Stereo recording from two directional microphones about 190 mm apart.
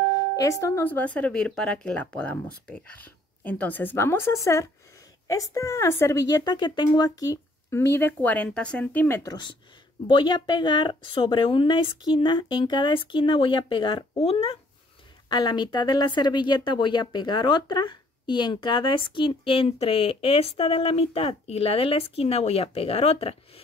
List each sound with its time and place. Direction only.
0.1 s a woman's voice: 15° left (ahead or behind)